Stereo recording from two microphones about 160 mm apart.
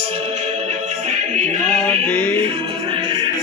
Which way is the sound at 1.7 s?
5° left (ahead or behind).